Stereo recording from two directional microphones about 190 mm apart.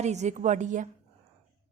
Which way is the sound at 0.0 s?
35° right (ahead or behind).